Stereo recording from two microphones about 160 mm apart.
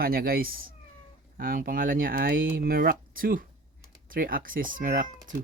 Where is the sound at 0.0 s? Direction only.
70° right (ahead or behind).